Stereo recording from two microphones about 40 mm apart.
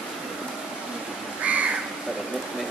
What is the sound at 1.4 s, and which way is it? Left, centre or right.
Crow, right.